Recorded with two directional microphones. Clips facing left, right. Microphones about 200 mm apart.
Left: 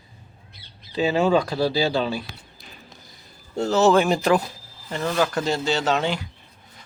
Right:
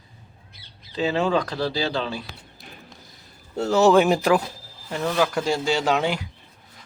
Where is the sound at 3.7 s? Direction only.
15° right (ahead or behind).